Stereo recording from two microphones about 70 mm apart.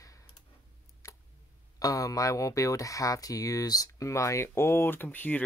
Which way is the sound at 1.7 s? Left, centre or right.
Left.